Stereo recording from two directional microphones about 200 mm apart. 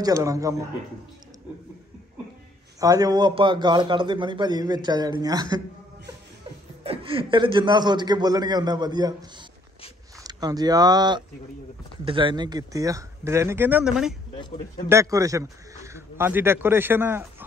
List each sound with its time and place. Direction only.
0.0 s speech: 15° right (ahead or behind)
2.8 s a man's voice: 20° right (ahead or behind)
6.8 s a man's voice: 30° right (ahead or behind)
10.2 s speech: 20° right (ahead or behind); by 14.1 s 5° right (ahead or behind)
14.9 s speech: 15° right (ahead or behind)